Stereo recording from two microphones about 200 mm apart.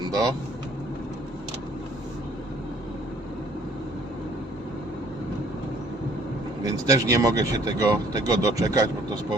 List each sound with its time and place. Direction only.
0.1 s speech: 20° right (ahead or behind)
6.6 s speech: 15° right (ahead or behind)